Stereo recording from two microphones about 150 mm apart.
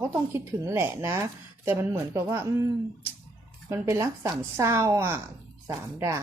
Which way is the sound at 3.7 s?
20° right (ahead or behind).